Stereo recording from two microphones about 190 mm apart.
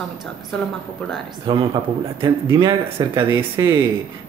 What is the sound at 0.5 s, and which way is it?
Speech, 5° left (ahead or behind).